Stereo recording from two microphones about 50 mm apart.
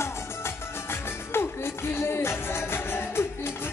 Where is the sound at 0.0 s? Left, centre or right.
Left.